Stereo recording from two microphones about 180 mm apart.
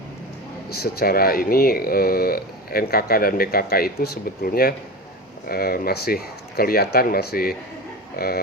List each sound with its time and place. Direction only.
0.7 s speech: 60° left (ahead or behind)